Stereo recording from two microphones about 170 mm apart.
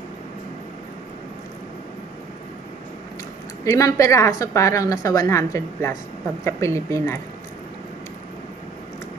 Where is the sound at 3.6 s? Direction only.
20° left (ahead or behind).